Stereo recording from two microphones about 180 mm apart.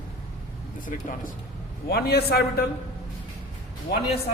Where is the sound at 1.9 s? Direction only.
60° left (ahead or behind).